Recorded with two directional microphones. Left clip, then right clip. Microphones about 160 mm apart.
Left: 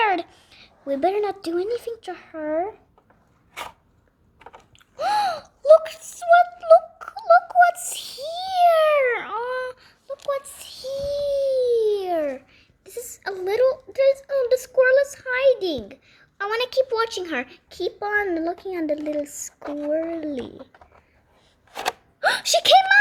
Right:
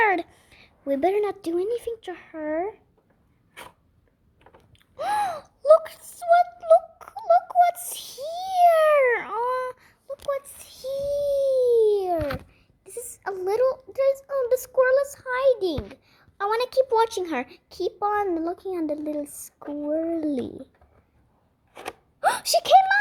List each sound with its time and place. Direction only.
0.0 s a woman's voice: 50° right (ahead or behind)
4.9 s a sound: 40° right (ahead or behind)
8.1 s babbling: 45° right (ahead or behind)
10.3 s a child's voice: 40° right (ahead or behind); by 19.5 s 20° right (ahead or behind)
20.1 s a child's voice: 35° right (ahead or behind)
22.2 s a sound: 20° right (ahead or behind)